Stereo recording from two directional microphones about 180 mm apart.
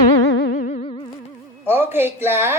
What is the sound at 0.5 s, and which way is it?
Music, 50° left (ahead or behind).